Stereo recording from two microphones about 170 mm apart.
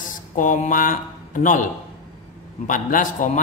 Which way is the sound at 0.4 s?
50° left (ahead or behind).